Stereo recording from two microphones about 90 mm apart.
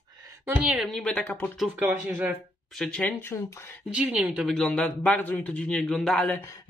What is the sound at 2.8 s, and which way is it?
Speech, 5° left (ahead or behind).